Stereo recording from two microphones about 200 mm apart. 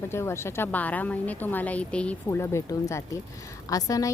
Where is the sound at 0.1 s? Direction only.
10° left (ahead or behind).